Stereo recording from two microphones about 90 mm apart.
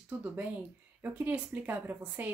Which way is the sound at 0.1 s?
20° right (ahead or behind).